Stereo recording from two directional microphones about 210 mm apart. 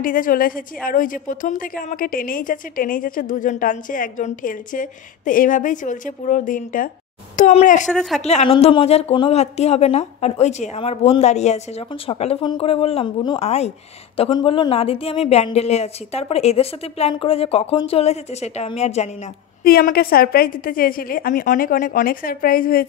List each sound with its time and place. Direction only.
0.0 s a woman's voice: 40° left (ahead or behind)
7.9 s speech: centre (ahead or behind)
8.2 s a woman's voice: 30° left (ahead or behind)
19.6 s a woman's voice: 45° left (ahead or behind)